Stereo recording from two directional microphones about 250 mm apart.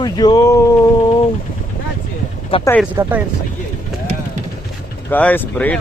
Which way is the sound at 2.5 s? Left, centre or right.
Left.